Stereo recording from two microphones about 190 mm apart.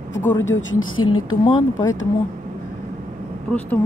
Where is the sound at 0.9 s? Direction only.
90° left.